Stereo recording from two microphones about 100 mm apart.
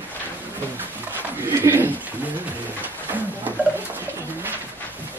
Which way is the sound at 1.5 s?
25° right (ahead or behind).